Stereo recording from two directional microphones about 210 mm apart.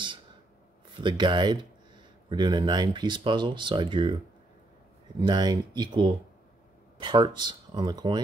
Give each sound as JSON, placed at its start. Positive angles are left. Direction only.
{"t": 1.0, "sound": "speech", "side_deg": -20}
{"t": 5.2, "sound": "speech", "side_deg": -20}